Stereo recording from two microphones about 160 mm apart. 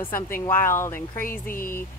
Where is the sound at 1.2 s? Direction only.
60° left (ahead or behind).